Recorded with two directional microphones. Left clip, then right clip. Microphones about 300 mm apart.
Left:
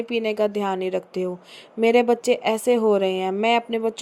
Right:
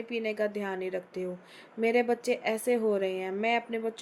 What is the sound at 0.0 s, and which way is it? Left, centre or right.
A woman's voice, left.